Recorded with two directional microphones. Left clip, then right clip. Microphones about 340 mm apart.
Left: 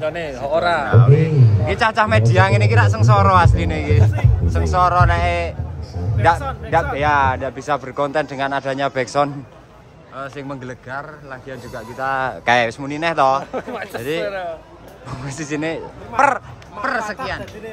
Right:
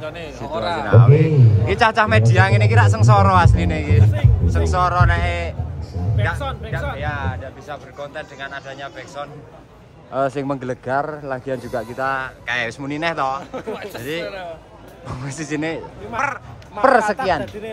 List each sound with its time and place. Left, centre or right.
0.0 s speech: left
0.8 s a man's voice: centre
10.1 s speech: centre
13.5 s speech: left
15.0 s a man's voice: centre
16.8 s speech: centre